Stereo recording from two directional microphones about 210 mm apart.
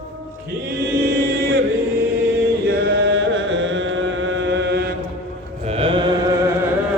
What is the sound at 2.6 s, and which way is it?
Chant, 50° right (ahead or behind).